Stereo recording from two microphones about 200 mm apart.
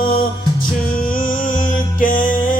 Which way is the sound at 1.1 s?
40° left (ahead or behind).